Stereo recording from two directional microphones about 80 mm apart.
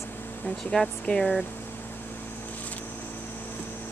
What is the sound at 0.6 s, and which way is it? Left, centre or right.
Speech, centre.